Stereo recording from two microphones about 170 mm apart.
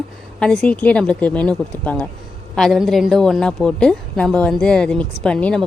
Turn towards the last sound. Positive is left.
turn(degrees=5)  # may be behind; listen again after turning